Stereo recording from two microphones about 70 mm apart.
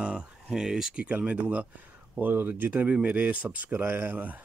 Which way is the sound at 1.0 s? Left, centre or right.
Centre.